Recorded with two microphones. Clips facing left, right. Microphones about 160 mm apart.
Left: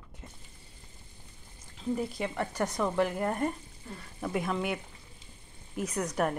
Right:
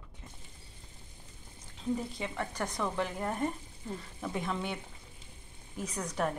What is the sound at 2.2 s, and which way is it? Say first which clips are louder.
Speech: left 4 dB; 10° left (ahead or behind).